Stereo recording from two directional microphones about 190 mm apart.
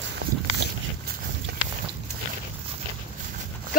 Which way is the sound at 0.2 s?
55° right (ahead or behind).